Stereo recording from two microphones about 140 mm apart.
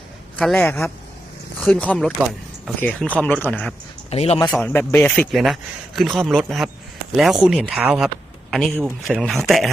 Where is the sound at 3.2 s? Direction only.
10° left (ahead or behind).